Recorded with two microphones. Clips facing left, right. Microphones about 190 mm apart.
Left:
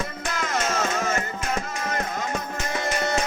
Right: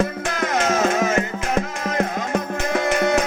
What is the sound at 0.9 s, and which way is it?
Music, 90° right.